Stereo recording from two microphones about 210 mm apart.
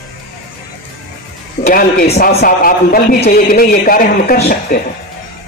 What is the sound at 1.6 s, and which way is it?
Speech, 35° left (ahead or behind).